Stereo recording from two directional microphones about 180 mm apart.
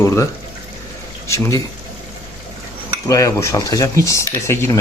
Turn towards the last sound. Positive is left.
turn(degrees=15)  # may be behind; listen again after turning